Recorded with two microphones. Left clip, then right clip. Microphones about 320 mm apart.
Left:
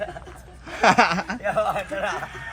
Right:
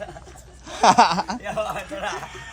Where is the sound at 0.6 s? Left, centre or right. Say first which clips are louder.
Right 2 dB; centre.